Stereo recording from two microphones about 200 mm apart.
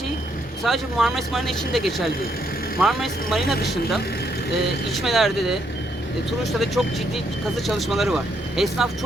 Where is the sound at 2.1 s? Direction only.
50° left (ahead or behind).